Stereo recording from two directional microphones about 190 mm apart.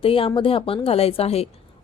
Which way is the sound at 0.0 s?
30° left (ahead or behind).